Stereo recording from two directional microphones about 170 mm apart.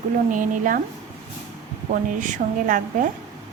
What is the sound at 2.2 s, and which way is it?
Speech, 50° right (ahead or behind).